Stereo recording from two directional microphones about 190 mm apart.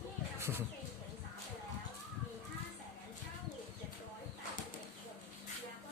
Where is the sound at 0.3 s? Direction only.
15° right (ahead or behind).